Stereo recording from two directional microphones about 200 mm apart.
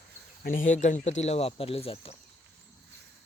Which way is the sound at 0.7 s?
40° left (ahead or behind).